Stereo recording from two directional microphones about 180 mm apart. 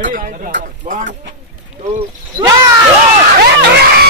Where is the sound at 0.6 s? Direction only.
45° right (ahead or behind).